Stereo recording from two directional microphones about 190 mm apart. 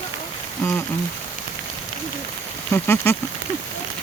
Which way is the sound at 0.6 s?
10° left (ahead or behind).